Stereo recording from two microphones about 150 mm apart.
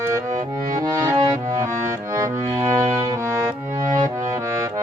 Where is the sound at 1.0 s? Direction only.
25° right (ahead or behind).